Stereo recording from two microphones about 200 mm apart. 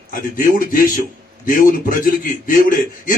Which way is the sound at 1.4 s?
45° left (ahead or behind).